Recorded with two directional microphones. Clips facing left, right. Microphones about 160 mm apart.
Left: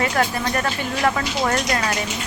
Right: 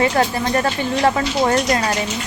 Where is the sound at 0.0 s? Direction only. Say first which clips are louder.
Right 4 dB; 30° right (ahead or behind).